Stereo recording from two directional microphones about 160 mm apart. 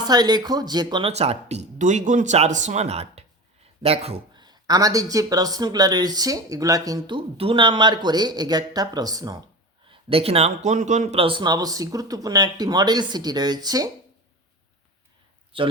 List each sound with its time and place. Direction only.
0.1 s speech: 25° right (ahead or behind)
1.1 s speech: 40° right (ahead or behind); by 7.2 s 20° right (ahead or behind)
7.2 s speech: 35° right (ahead or behind)
9.9 s speech: 35° right (ahead or behind)
15.5 s speech: 35° right (ahead or behind)